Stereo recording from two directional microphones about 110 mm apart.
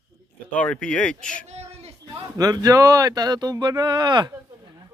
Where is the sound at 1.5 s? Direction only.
75° right (ahead or behind).